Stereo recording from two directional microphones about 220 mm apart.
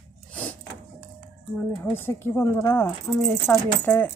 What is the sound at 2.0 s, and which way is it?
Speech, 10° left (ahead or behind).